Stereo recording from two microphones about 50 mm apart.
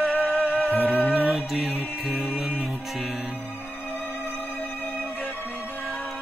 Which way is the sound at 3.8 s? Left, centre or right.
Left.